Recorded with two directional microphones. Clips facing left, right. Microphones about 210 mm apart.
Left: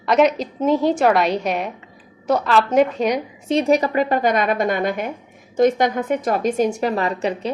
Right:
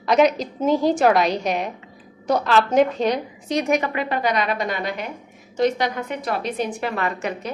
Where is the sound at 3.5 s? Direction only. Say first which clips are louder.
Left 4 dB; 30° left (ahead or behind).